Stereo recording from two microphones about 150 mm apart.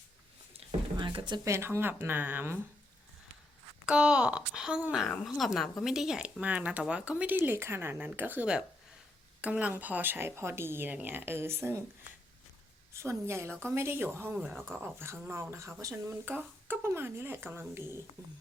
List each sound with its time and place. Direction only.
0.9 s a sound: 30° right (ahead or behind)
1.5 s speech: 15° right (ahead or behind)
3.8 s speech: 5° right (ahead or behind)
12.9 s speech: 20° right (ahead or behind)